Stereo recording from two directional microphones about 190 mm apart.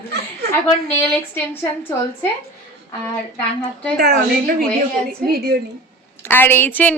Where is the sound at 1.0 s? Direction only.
10° left (ahead or behind).